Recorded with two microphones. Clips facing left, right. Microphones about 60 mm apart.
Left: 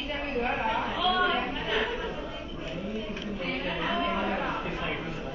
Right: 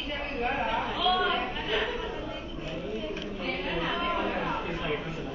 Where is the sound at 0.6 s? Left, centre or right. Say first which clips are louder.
Even; centre.